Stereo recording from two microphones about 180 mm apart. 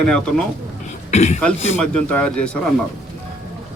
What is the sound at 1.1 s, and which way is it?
Speech, 40° left (ahead or behind).